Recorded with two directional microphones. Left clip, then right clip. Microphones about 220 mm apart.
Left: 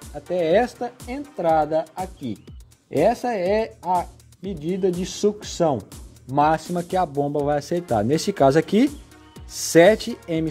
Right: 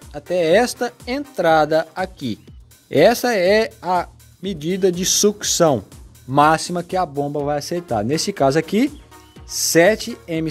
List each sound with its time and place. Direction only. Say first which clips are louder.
0.1 s speech: right 4 dB; 10° right (ahead or behind)